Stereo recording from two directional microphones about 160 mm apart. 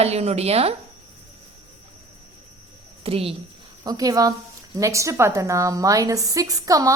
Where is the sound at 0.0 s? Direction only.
40° right (ahead or behind).